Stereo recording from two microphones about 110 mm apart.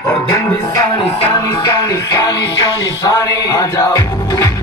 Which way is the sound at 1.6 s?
30° left (ahead or behind).